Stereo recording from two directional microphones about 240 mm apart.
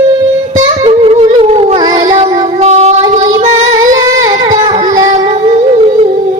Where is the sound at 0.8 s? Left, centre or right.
Right.